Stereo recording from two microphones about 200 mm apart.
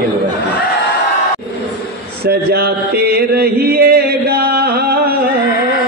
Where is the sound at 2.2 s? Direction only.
50° right (ahead or behind).